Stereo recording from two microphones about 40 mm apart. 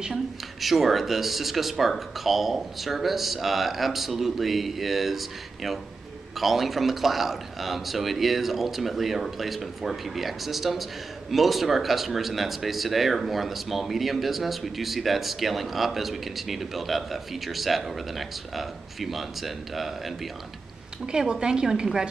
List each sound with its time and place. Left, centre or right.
0.1 s a man's voice: centre
21.0 s a woman's voice: centre